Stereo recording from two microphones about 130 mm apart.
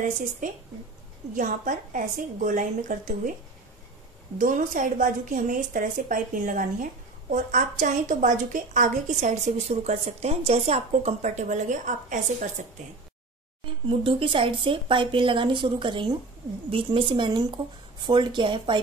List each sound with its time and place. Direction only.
1.3 s a woman's voice: 90° right
4.4 s a woman's voice: 85° right
13.8 s a woman's voice: 40° right (ahead or behind)